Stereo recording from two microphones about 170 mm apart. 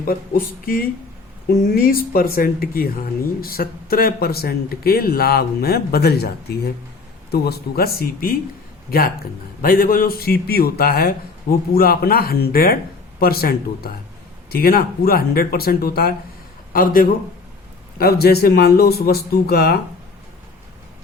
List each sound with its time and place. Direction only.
0.0 s speech: 60° left (ahead or behind)
17.9 s speech: 65° left (ahead or behind)